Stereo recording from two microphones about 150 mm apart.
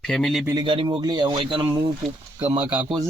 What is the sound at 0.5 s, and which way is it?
Speech, 35° right (ahead or behind).